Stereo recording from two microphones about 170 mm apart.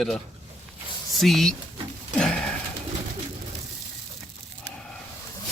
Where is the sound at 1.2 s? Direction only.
Centre (ahead or behind).